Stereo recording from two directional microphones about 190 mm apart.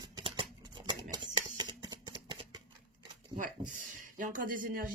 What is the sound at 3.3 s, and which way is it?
Speech, 45° right (ahead or behind).